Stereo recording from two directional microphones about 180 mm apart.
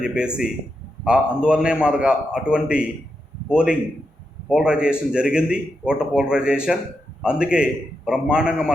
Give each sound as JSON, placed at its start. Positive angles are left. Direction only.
{"t": 0.0, "sound": "speech", "side_deg": -5}
{"t": 4.4, "sound": "speech", "side_deg": -5}